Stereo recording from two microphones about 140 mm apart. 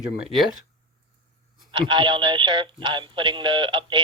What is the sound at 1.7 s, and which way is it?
Speech, 35° right (ahead or behind).